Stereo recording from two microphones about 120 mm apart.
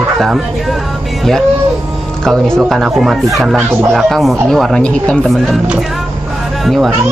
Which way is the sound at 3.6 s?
20° right (ahead or behind).